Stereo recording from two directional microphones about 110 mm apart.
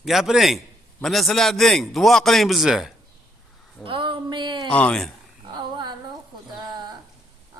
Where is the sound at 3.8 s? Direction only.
50° right (ahead or behind).